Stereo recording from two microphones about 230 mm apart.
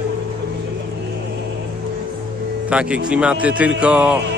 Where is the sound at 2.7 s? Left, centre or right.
Centre.